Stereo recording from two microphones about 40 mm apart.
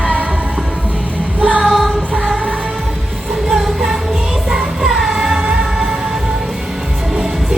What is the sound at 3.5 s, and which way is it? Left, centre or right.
Music, centre.